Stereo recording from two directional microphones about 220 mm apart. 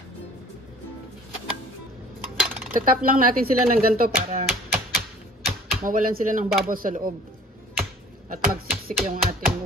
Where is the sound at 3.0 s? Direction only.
40° right (ahead or behind).